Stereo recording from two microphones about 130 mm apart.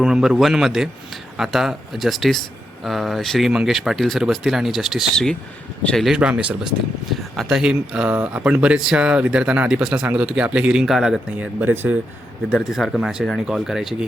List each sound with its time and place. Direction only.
0.0 s speech: 5° right (ahead or behind)
12.5 s speech: centre (ahead or behind)